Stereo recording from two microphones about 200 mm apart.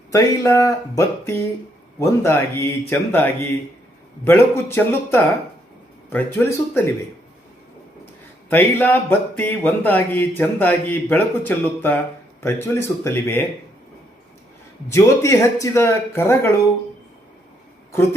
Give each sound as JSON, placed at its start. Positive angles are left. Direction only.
{"t": 0.1, "sound": "speech", "side_deg": 15}
{"t": 8.4, "sound": "speech", "side_deg": 10}
{"t": 14.8, "sound": "speech", "side_deg": 15}